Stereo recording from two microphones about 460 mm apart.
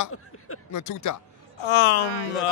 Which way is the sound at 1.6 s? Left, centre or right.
Left.